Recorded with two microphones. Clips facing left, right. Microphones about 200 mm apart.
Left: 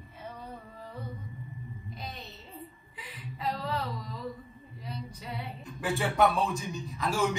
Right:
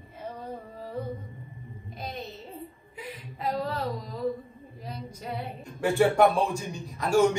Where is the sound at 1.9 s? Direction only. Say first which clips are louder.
Right 5 dB; 50° right (ahead or behind).